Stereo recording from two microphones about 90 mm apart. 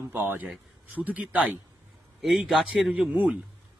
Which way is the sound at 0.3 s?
15° right (ahead or behind).